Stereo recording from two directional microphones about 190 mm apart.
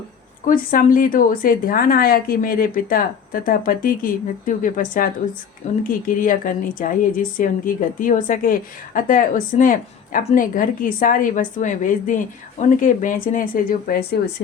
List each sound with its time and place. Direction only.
0.4 s a woman's voice: 45° left (ahead or behind)